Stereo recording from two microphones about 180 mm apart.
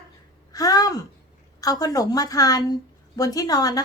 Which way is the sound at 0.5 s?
20° left (ahead or behind).